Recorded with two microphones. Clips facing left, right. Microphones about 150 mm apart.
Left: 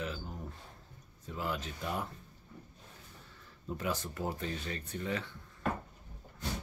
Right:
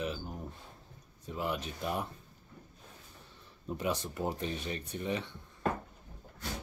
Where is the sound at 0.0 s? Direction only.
20° right (ahead or behind).